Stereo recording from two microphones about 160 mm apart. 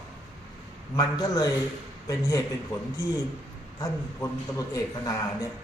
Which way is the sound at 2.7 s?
20° left (ahead or behind).